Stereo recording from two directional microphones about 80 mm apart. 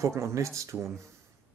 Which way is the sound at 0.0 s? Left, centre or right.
Right.